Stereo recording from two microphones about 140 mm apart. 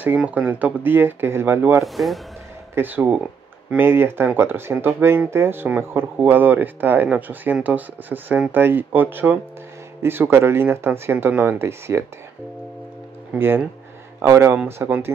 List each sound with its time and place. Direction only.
0.0 s speech: 10° right (ahead or behind)
1.9 s speech: centre (ahead or behind)
2.7 s speech: 15° right (ahead or behind)
13.3 s speech: 15° right (ahead or behind)